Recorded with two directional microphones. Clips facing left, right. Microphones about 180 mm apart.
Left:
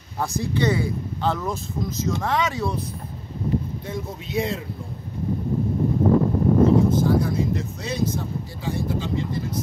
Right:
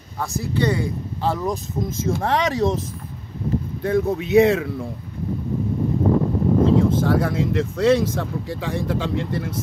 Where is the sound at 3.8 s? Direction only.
65° right (ahead or behind).